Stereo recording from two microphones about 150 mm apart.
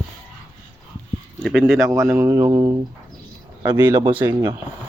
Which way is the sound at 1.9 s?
15° right (ahead or behind).